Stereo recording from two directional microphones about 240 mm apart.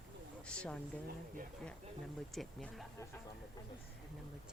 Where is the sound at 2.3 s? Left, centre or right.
Centre.